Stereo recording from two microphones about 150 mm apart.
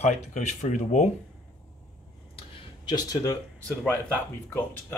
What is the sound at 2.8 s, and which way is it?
Speech, 25° left (ahead or behind).